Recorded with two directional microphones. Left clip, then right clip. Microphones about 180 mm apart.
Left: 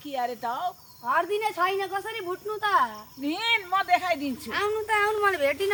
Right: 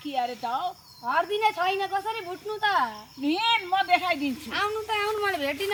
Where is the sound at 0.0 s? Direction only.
15° left (ahead or behind).